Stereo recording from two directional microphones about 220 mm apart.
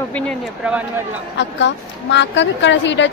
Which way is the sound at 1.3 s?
55° left (ahead or behind).